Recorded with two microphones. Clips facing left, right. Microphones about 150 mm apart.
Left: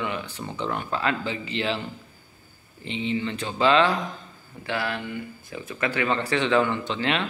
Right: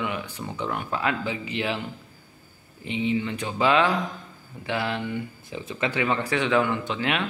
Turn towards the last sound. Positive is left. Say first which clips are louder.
# left 1 dB
turn(degrees=-10)  # may be behind; listen again after turning